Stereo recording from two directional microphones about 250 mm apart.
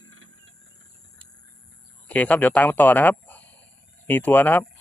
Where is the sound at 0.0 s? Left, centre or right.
Right.